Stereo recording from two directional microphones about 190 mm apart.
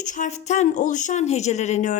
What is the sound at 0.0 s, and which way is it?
A woman's voice, 40° left (ahead or behind).